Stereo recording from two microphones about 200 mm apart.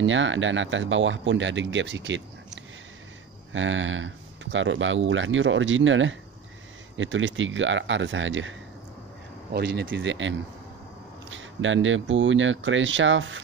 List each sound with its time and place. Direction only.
0.0 s speech: 70° right (ahead or behind)
3.5 s speech: 70° right (ahead or behind)
9.5 s speech: 55° right (ahead or behind); by 13.4 s 70° right (ahead or behind)